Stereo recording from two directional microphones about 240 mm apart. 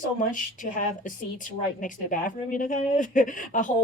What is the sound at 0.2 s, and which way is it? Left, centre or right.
Speech, left.